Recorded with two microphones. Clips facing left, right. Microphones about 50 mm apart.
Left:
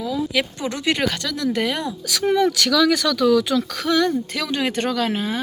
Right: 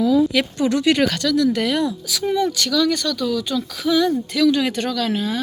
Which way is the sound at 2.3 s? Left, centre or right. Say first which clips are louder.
Left 2 dB; left.